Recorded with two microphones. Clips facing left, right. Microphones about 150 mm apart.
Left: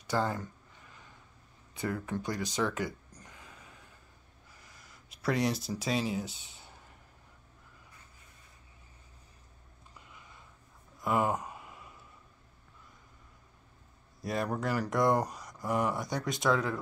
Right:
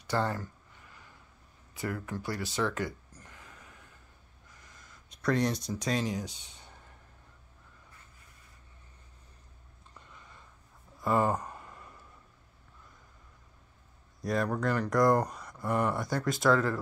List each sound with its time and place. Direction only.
0.0 s speech: 15° left (ahead or behind)
1.7 s speech: 25° left (ahead or behind)
3.2 s a sound: 15° left (ahead or behind)
5.1 s speech: 5° left (ahead or behind)
11.0 s a sound: 5° left (ahead or behind)
14.2 s speech: centre (ahead or behind)